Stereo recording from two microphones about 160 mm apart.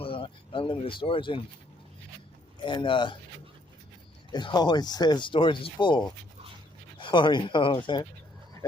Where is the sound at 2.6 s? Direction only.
30° left (ahead or behind).